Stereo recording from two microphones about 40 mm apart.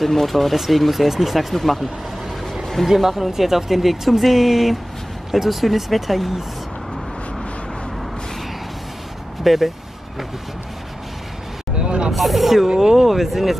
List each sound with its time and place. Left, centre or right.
0.0 s speech: centre
2.9 s speech: centre
9.4 s speech: centre
11.7 s vehicle: right
12.1 s speech: centre